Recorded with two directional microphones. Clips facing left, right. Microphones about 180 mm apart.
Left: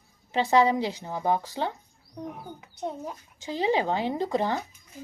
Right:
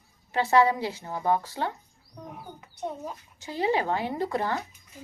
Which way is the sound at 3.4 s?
20° left (ahead or behind).